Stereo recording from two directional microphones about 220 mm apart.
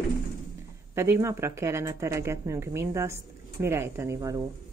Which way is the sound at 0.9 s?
10° right (ahead or behind).